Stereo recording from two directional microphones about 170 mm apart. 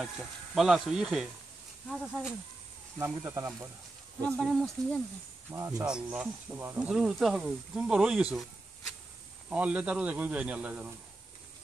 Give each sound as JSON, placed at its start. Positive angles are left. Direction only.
{"t": 0.6, "sound": "speech", "side_deg": 0}
{"t": 3.0, "sound": "a man's voice", "side_deg": -15}
{"t": 4.3, "sound": "speech", "side_deg": 5}
{"t": 5.5, "sound": "a man's voice", "side_deg": -20}
{"t": 5.9, "sound": "speech", "side_deg": -5}
{"t": 9.5, "sound": "a man's voice", "side_deg": -5}